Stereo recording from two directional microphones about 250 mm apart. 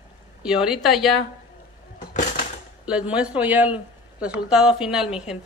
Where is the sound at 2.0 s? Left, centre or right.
Left.